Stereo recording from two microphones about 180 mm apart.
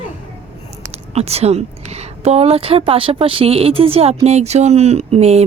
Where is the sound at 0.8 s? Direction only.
35° right (ahead or behind).